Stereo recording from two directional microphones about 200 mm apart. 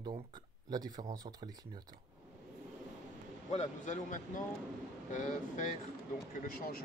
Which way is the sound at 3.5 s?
40° left (ahead or behind).